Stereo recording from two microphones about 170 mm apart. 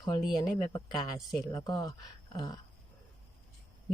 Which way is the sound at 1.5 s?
20° left (ahead or behind).